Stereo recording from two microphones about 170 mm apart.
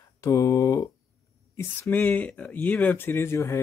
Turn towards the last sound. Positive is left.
turn(degrees=15)  # may be behind; listen again after turning